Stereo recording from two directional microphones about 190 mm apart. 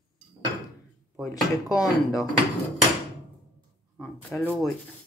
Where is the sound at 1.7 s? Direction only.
20° left (ahead or behind).